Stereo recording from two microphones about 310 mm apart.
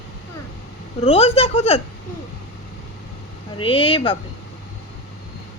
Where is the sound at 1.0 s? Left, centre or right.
Centre.